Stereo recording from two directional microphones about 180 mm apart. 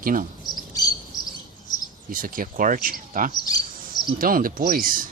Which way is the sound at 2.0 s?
50° right (ahead or behind).